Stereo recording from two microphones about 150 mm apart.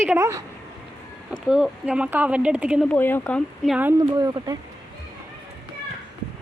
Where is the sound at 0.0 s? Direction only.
15° right (ahead or behind).